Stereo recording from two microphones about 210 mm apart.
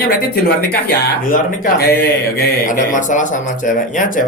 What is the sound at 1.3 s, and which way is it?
Speech, 40° left (ahead or behind).